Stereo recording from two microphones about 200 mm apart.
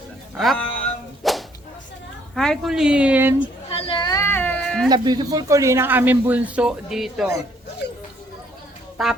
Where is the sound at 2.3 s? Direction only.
Centre (ahead or behind).